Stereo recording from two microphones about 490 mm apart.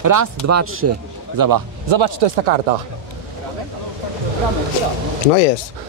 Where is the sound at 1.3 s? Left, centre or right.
Right.